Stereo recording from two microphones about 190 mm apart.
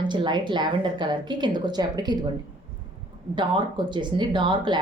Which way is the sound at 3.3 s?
25° right (ahead or behind).